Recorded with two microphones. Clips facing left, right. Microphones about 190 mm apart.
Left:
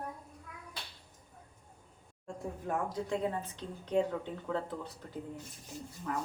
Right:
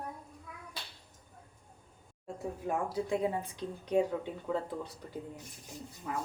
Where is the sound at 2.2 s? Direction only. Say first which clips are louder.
Right 2 dB; 10° right (ahead or behind).